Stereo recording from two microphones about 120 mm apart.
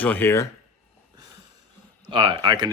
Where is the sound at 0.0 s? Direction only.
15° left (ahead or behind).